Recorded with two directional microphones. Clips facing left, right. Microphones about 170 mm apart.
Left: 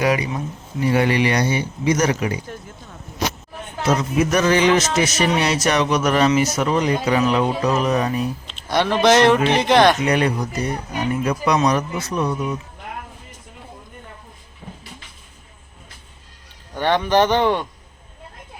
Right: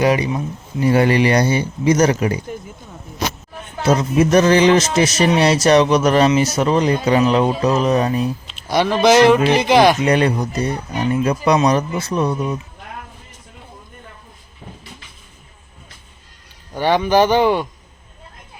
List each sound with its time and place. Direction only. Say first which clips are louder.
0.0 s speech: right 3 dB; 30° right (ahead or behind)
3.8 s speech: right 4 dB; 30° right (ahead or behind)
8.4 s speech: right 1 dB; 5° right (ahead or behind)
10.1 s speech: right 3 dB; 30° right (ahead or behind)
16.7 s a man's voice: right 2 dB; 10° right (ahead or behind)